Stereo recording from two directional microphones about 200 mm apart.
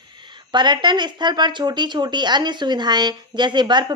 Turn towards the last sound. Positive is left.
turn(degrees=-20)  # may be behind; listen again after turning